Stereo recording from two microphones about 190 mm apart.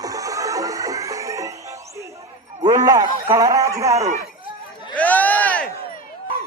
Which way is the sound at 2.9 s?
20° right (ahead or behind).